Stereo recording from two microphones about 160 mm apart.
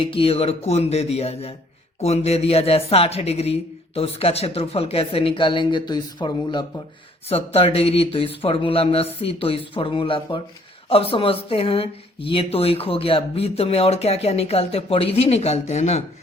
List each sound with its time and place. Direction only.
0.0 s speech: 35° left (ahead or behind)
7.3 s speech: 40° left (ahead or behind)